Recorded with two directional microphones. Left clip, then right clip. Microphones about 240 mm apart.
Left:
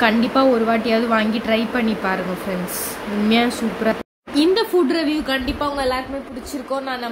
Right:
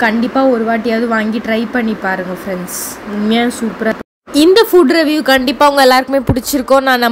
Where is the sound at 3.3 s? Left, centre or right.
Centre.